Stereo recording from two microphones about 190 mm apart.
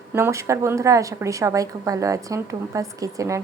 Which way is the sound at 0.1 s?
15° right (ahead or behind).